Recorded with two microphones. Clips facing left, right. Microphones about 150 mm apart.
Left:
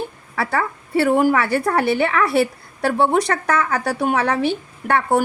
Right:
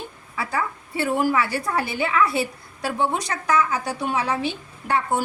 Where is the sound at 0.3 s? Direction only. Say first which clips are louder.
Left 5 dB; 65° left (ahead or behind).